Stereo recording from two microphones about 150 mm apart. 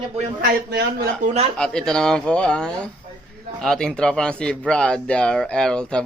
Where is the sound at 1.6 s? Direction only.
5° left (ahead or behind).